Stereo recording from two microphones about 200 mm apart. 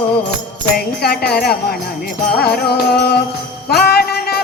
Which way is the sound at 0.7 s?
50° left (ahead or behind).